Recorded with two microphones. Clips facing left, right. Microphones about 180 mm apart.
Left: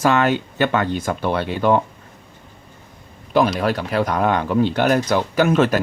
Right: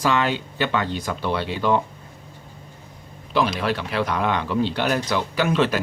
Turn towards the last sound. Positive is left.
turn(degrees=45)  # may be behind; listen again after turning